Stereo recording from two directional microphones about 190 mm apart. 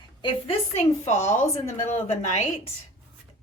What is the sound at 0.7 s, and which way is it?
A woman's voice, 35° left (ahead or behind).